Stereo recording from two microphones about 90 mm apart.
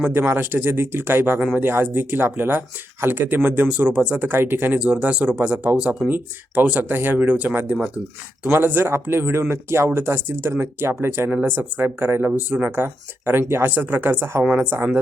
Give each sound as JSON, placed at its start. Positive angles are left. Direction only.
{"t": 0.0, "sound": "speech", "side_deg": -25}
{"t": 1.4, "sound": "speech", "side_deg": -10}
{"t": 1.6, "sound": "speech", "side_deg": -25}